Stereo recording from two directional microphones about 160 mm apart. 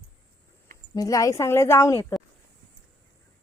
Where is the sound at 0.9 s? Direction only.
20° left (ahead or behind).